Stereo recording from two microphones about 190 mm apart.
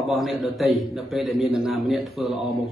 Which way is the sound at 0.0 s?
Centre (ahead or behind).